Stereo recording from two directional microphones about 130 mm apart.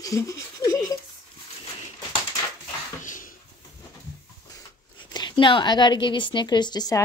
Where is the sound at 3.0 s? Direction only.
90° left.